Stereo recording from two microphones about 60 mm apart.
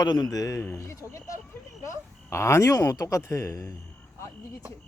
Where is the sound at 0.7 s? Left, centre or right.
Left.